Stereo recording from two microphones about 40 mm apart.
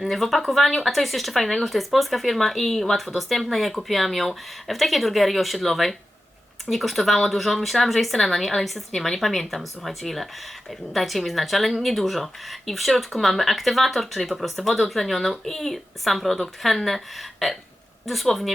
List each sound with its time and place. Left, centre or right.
0.1 s speech: centre